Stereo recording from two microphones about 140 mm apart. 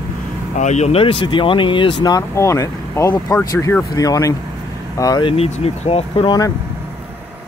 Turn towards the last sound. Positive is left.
turn(degrees=35)  # may be behind; listen again after turning